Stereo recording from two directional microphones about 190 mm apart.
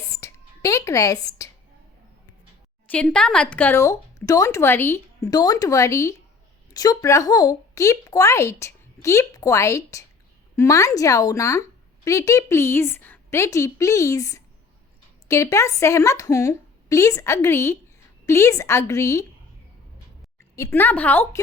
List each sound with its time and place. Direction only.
0.0 s a sound: 15° left (ahead or behind)
2.8 s speech: 5° left (ahead or behind)
20.6 s speech: 10° left (ahead or behind)